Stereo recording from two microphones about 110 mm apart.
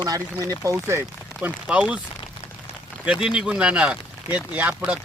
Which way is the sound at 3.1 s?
10° right (ahead or behind).